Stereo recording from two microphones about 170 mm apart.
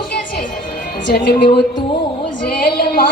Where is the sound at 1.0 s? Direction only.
70° left (ahead or behind).